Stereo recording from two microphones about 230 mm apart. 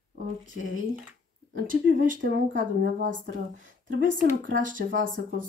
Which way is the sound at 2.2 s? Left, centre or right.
Right.